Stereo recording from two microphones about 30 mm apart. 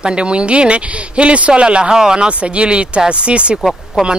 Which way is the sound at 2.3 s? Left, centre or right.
Right.